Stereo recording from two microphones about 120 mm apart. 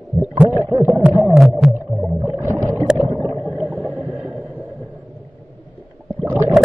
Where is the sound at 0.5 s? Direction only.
20° right (ahead or behind).